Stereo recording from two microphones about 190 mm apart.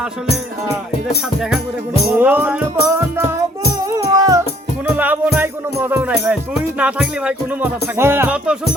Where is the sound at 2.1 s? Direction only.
10° right (ahead or behind).